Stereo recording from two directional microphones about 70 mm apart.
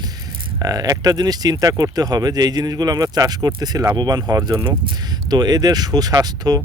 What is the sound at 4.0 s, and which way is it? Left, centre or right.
Speech, right.